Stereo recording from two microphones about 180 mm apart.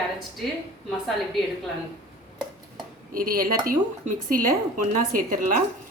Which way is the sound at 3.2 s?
55° right (ahead or behind).